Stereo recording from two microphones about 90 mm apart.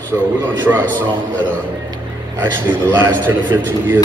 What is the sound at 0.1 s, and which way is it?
Speech, 25° right (ahead or behind).